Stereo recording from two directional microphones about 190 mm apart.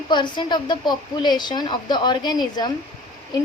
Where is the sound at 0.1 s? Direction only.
25° left (ahead or behind).